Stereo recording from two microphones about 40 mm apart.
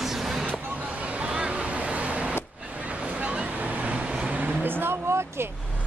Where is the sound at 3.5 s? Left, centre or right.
Right.